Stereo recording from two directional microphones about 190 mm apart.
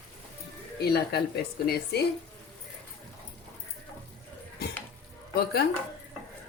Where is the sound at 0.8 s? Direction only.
55° left (ahead or behind).